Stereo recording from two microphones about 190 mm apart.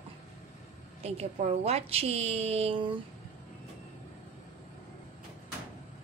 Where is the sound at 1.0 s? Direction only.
35° right (ahead or behind).